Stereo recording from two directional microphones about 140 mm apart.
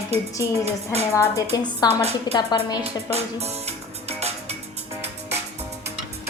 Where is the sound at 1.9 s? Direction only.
50° right (ahead or behind).